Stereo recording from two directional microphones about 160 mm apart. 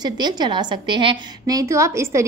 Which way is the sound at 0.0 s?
25° right (ahead or behind).